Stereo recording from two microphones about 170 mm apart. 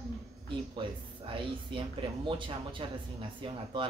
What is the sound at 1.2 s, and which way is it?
Speech, 30° right (ahead or behind).